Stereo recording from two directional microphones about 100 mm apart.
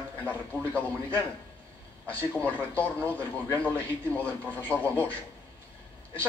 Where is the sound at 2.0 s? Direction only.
15° left (ahead or behind).